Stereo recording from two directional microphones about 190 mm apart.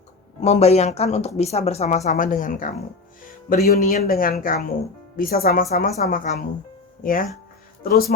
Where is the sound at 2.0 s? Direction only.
45° left (ahead or behind).